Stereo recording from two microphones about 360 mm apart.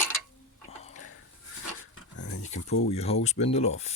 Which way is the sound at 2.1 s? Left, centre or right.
Left.